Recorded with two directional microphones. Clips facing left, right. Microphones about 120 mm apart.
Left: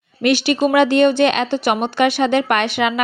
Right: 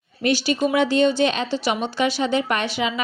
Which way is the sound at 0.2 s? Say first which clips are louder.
Left 5 dB; 70° left (ahead or behind).